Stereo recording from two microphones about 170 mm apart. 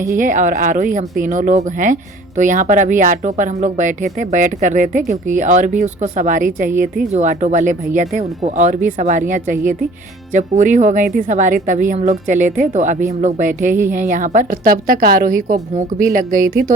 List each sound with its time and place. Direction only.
0.2 s speech: 50° right (ahead or behind)